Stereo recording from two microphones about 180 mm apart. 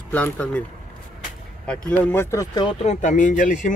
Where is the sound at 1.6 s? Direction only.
5° left (ahead or behind).